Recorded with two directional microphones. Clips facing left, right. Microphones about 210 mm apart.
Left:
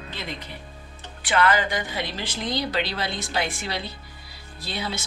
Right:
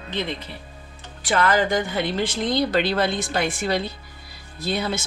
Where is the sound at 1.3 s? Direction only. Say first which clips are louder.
Right 2 dB; 40° right (ahead or behind).